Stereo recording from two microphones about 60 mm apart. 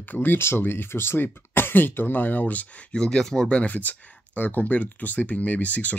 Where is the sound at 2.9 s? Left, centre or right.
Centre.